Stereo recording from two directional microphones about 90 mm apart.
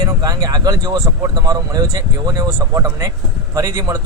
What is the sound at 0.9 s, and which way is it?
Speech, 30° right (ahead or behind).